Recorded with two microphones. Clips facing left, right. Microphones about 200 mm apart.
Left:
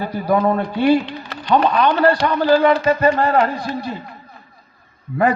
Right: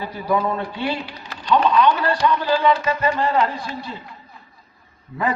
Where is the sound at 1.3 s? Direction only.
60° left (ahead or behind).